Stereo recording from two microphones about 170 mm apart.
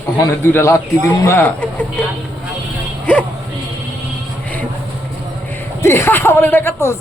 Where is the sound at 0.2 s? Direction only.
15° left (ahead or behind).